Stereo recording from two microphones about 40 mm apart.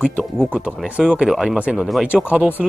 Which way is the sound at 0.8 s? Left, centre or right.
Right.